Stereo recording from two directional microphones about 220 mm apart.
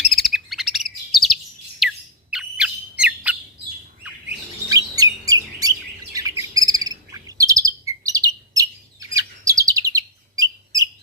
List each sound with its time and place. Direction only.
0.1 s chirp: centre (ahead or behind)
1.8 s squawk: centre (ahead or behind)
2.3 s bird: 5° right (ahead or behind)
4.9 s chirp: 15° right (ahead or behind)